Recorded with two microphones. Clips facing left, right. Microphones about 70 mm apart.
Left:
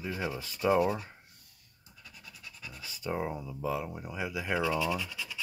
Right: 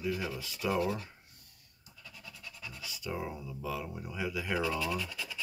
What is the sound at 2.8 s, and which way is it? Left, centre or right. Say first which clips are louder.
Speech: left 4 dB; left.